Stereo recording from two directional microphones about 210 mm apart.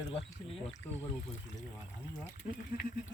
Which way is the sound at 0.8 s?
10° left (ahead or behind).